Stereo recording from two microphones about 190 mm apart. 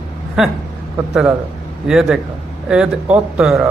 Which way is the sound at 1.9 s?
Centre (ahead or behind).